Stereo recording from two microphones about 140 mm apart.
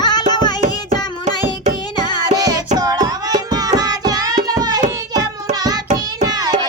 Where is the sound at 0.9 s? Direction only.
60° right (ahead or behind).